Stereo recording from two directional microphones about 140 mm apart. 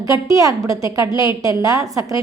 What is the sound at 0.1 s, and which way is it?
A woman's voice, 25° right (ahead or behind).